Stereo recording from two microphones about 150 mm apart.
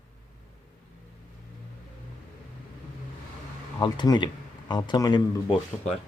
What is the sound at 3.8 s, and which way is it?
Speech, 30° left (ahead or behind).